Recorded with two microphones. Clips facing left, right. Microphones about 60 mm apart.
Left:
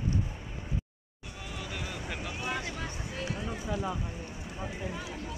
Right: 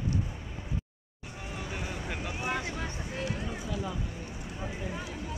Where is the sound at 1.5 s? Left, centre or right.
Right.